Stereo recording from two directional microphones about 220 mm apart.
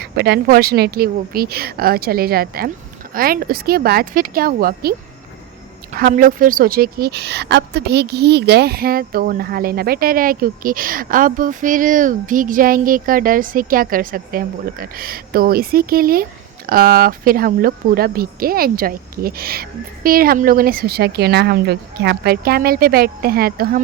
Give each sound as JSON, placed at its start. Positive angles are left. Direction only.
{"t": 0.0, "sound": "speech", "side_deg": -45}